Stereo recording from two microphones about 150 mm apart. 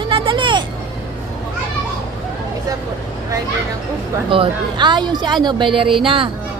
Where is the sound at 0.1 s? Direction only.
35° right (ahead or behind).